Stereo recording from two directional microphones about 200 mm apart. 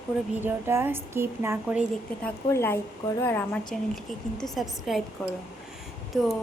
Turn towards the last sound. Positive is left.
turn(degrees=0)  # may be behind; listen again after turning